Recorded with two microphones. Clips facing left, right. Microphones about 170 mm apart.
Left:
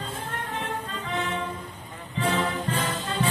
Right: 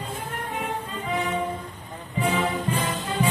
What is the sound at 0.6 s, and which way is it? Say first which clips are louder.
Music: right 2 dB; 10° right (ahead or behind).